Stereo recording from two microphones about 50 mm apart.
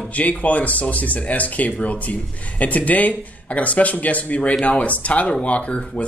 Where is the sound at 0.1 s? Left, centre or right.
Left.